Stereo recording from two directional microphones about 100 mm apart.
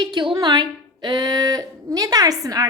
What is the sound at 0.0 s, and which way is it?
A woman's voice, 55° right (ahead or behind).